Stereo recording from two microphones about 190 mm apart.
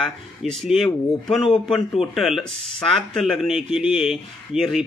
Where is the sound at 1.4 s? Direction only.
25° left (ahead or behind).